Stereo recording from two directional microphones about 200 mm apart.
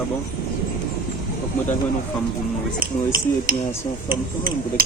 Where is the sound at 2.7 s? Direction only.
45° right (ahead or behind).